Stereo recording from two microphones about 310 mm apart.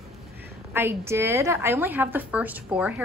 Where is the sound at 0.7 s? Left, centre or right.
Centre.